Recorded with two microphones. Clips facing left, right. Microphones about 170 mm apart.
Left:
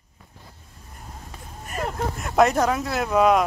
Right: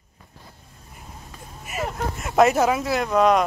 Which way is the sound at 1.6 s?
5° right (ahead or behind).